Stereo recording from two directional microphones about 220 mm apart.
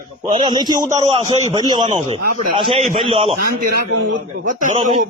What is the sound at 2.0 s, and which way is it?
A man's voice, 30° right (ahead or behind).